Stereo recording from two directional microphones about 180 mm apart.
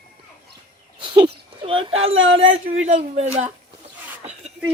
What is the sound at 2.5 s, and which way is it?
Speech, 35° right (ahead or behind).